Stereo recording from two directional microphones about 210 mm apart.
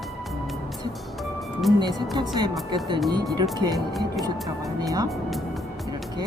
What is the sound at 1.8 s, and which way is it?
Speech, 20° right (ahead or behind).